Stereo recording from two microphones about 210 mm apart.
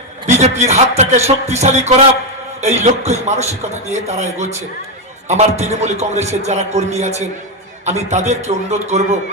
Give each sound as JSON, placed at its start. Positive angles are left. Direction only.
{"t": 0.3, "sound": "a man's voice", "side_deg": -30}